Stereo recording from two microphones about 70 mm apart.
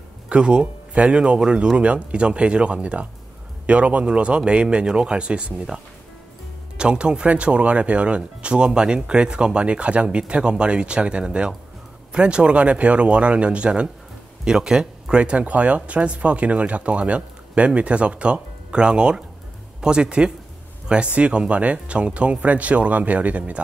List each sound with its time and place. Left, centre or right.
0.3 s speech: centre
6.8 s speech: centre